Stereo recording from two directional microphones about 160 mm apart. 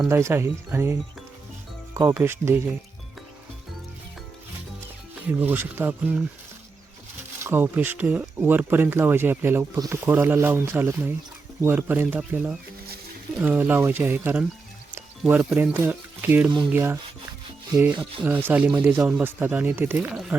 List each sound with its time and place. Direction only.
0.0 s speech: 15° right (ahead or behind)
5.4 s speech: 15° right (ahead or behind)
7.4 s speech: 15° right (ahead or behind)